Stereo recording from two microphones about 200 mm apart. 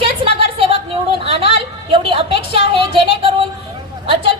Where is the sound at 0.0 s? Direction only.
25° right (ahead or behind).